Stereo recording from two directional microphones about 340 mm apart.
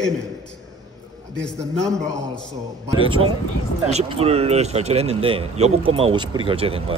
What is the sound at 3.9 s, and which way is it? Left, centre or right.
Speech, centre.